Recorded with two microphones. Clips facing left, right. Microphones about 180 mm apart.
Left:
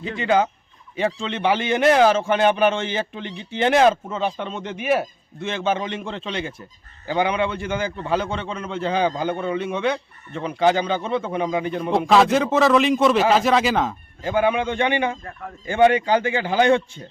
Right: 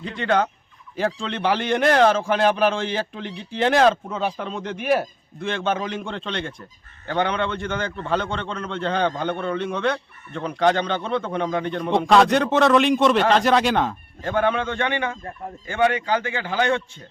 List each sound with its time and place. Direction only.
0.2 s a man's voice: 5° left (ahead or behind)